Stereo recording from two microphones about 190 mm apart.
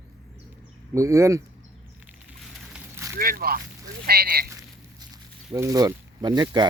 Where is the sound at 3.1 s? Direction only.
50° right (ahead or behind).